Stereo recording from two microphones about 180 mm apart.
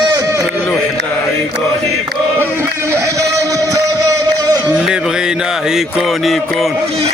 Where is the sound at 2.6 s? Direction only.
15° right (ahead or behind).